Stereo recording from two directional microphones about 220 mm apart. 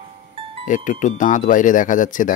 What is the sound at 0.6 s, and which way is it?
Speech, 35° left (ahead or behind).